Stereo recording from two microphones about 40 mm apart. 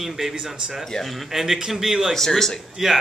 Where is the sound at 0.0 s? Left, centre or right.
Centre.